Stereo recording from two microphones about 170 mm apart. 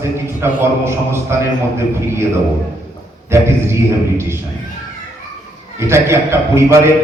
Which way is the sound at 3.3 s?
15° right (ahead or behind).